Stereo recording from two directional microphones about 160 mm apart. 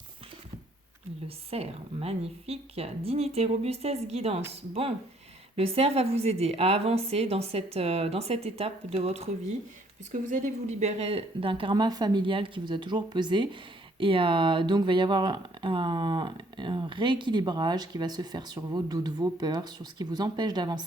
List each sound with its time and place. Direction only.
1.5 s a woman's voice: 40° right (ahead or behind)
10.1 s a woman's voice: 50° right (ahead or behind); by 20.8 s 25° right (ahead or behind)